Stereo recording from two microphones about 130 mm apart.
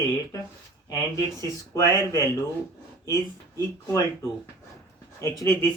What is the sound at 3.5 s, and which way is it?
Speech, 25° left (ahead or behind).